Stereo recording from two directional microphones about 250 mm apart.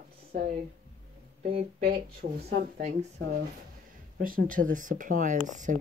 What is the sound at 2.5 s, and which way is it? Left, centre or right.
Speech, right.